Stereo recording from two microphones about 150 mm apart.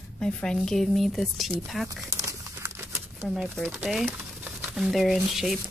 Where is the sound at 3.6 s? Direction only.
5° left (ahead or behind).